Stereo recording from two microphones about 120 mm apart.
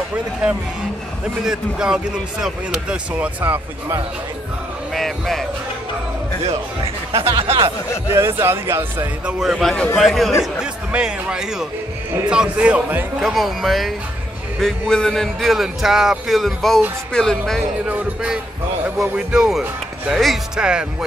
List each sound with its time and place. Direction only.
1.4 s speech: 5° right (ahead or behind)
4.9 s speech: centre (ahead or behind)
6.4 s speech: 50° right (ahead or behind)
8.1 s speech: 20° right (ahead or behind)
9.2 s speech: 5° right (ahead or behind)
17.8 s speech: 10° right (ahead or behind)